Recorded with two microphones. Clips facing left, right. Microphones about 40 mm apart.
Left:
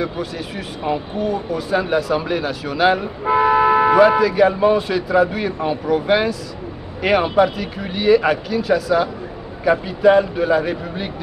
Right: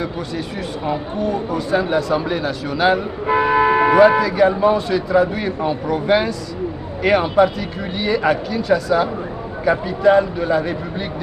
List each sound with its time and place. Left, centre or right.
0.8 s speech: centre
3.3 s speech: centre
3.5 s a sound: centre
4.2 s a man's voice: centre